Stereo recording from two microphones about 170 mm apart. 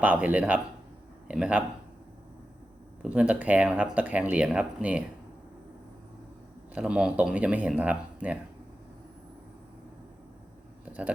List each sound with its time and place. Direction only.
0.0 s speech: 10° right (ahead or behind)
3.0 s speech: 5° right (ahead or behind)
6.7 s speech: 5° right (ahead or behind)